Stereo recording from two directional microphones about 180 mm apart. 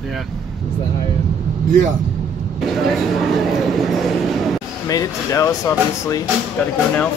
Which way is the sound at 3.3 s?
Centre (ahead or behind).